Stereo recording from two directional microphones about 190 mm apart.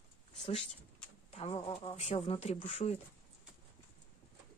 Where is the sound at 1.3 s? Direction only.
35° left (ahead or behind).